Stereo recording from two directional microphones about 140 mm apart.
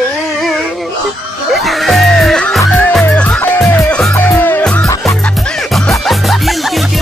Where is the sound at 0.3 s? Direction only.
Centre (ahead or behind).